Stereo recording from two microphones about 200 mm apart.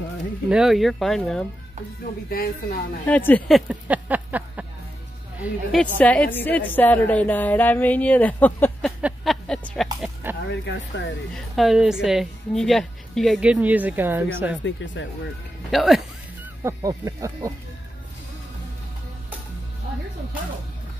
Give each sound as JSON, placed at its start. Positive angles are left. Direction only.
{"t": 0.5, "sound": "a woman's voice", "side_deg": 0}
{"t": 2.2, "sound": "speech", "side_deg": 50}
{"t": 3.1, "sound": "a woman's voice", "side_deg": 10}
{"t": 9.0, "sound": "music", "side_deg": 0}
{"t": 9.9, "sound": "speech", "side_deg": -5}
{"t": 10.5, "sound": "speech", "side_deg": 60}
{"t": 11.3, "sound": "a woman's voice", "side_deg": 0}
{"t": 14.8, "sound": "speech", "side_deg": 65}
{"t": 15.7, "sound": "a woman's voice", "side_deg": 0}
{"t": 16.6, "sound": "speech", "side_deg": -15}